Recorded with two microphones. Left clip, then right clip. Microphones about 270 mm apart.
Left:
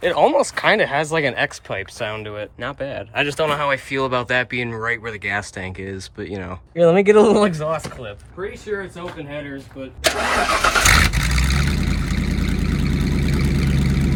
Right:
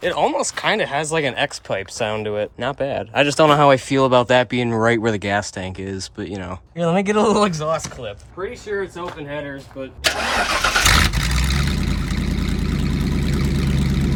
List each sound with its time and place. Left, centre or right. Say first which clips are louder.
0.0 s speech: left 3 dB; centre
10.5 s vehicle: left 1 dB; centre